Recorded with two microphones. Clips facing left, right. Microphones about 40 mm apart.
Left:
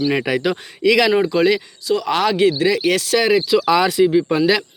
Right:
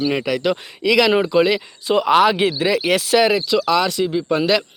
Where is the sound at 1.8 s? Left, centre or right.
Right.